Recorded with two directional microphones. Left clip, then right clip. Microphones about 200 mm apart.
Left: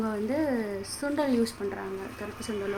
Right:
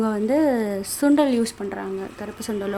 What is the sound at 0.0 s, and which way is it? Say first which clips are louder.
Speech: right 9 dB; 35° right (ahead or behind).